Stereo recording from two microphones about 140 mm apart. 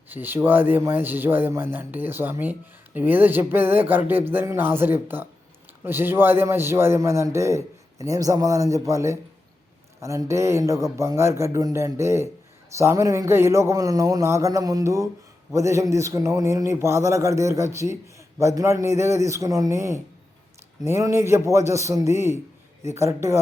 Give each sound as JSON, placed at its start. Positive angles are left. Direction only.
{"t": 0.1, "sound": "a man's voice", "side_deg": -15}